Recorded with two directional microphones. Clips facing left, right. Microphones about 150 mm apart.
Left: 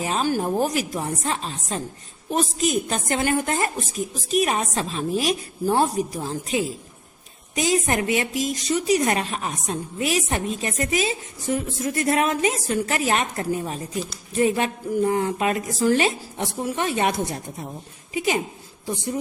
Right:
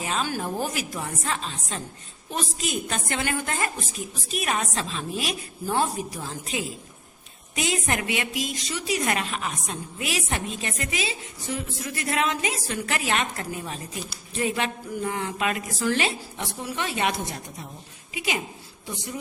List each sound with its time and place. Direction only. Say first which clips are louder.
0.0 s a woman's voice: left 5 dB; 40° left (ahead or behind)
9.0 s a woman's voice: left 4 dB; 30° left (ahead or behind)
18.1 s a woman's voice: left 6 dB; 40° left (ahead or behind)